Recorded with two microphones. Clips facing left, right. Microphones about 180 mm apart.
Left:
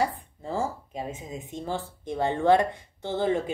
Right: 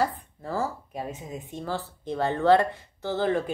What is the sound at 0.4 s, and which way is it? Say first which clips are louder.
Speech: even; 20° left (ahead or behind).